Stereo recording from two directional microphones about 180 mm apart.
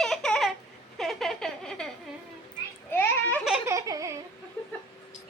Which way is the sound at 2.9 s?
10° left (ahead or behind).